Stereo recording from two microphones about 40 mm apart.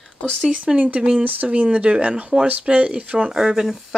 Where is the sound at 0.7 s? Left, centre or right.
Right.